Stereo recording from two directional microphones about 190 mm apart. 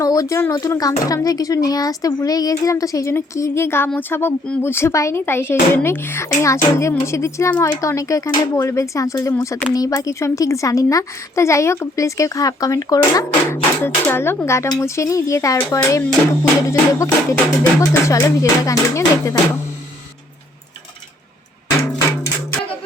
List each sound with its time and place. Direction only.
0.0 s speech: 20° left (ahead or behind)